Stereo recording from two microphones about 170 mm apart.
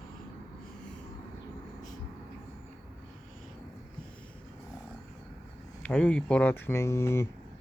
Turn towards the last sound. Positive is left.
turn(degrees=15)  # may be behind; listen again after turning